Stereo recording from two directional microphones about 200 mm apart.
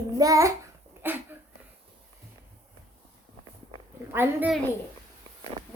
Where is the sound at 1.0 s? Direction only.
10° right (ahead or behind).